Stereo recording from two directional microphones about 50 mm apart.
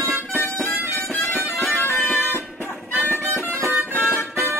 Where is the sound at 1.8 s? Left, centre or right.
Left.